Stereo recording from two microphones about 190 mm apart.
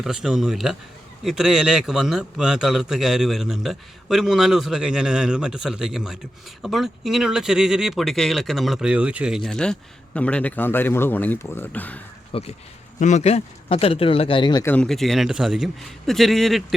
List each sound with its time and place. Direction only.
0.0 s a man's voice: 5° right (ahead or behind)
12.3 s speech: 30° left (ahead or behind)
14.6 s a man's voice: 10° left (ahead or behind)